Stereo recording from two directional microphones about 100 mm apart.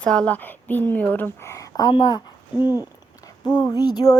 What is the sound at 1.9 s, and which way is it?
Speech, 50° left (ahead or behind).